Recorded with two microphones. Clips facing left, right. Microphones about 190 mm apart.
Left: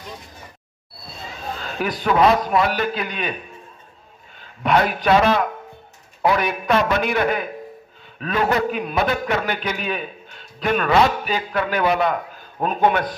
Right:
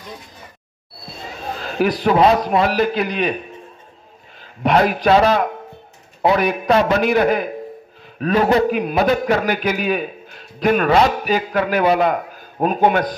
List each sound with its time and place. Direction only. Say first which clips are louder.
1.5 s a man's voice: right 7 dB; 40° right (ahead or behind)
4.4 s a man's voice: right 3 dB; 35° right (ahead or behind)